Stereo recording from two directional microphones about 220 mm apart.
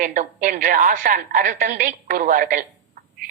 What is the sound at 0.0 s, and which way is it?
A woman's voice, 35° right (ahead or behind).